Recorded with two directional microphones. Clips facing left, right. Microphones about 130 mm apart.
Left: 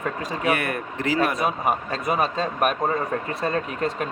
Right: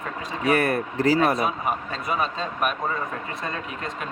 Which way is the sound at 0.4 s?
35° right (ahead or behind).